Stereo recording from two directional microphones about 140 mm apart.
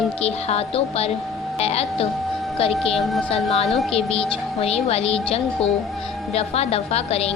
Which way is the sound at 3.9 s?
45° left (ahead or behind).